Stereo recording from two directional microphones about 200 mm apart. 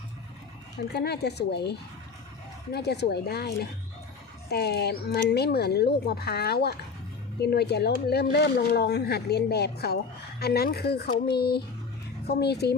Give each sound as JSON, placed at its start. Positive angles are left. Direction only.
{"t": 0.9, "sound": "speech", "side_deg": 55}
{"t": 2.7, "sound": "speech", "side_deg": 55}